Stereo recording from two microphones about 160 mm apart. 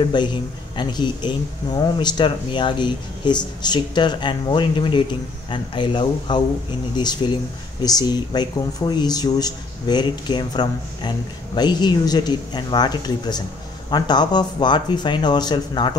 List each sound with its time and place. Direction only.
0.0 s speech: 30° left (ahead or behind)